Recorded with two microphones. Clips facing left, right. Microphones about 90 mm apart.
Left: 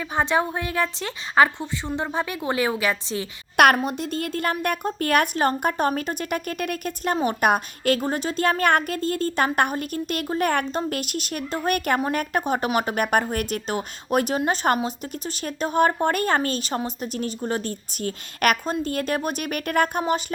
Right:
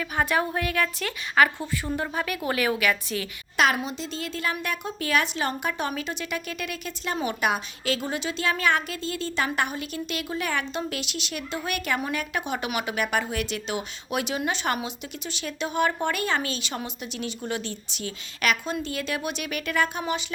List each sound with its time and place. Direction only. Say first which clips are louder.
0.0 s a woman's voice: left 3 dB; 25° left (ahead or behind)
3.6 s a woman's voice: left 6 dB; 55° left (ahead or behind)